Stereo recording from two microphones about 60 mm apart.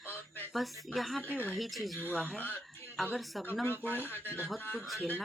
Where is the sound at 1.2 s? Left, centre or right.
Left.